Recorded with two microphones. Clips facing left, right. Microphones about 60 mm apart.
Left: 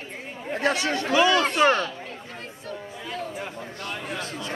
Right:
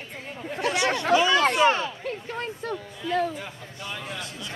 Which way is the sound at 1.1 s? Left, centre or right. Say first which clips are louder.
Left 1 dB; left.